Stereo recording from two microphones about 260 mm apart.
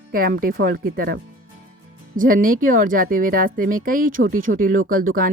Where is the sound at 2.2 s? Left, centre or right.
Right.